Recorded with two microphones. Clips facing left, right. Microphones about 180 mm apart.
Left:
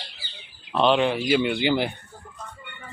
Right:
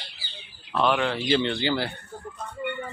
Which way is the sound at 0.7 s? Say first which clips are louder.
Left 4 dB; 20° left (ahead or behind).